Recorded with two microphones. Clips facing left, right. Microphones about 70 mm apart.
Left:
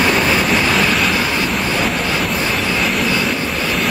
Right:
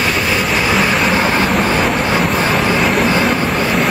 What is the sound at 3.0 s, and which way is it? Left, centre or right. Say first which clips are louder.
Vehicle: right 4 dB; right.